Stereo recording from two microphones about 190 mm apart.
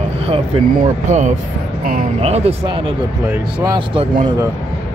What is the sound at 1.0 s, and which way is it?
Speech, 40° right (ahead or behind).